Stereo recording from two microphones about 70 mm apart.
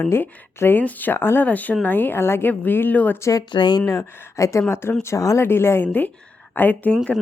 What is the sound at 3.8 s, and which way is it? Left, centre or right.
Speech, left.